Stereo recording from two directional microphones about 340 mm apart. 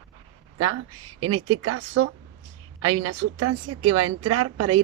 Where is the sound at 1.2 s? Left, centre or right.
Right.